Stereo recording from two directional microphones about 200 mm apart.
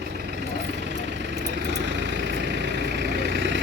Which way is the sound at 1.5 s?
60° right (ahead or behind).